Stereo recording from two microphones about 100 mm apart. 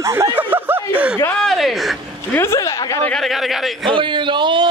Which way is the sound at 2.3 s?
25° left (ahead or behind).